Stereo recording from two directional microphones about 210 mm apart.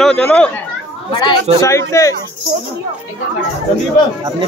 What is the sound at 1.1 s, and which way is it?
Speech, 20° left (ahead or behind).